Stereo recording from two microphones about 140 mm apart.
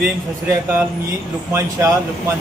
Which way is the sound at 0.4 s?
15° right (ahead or behind).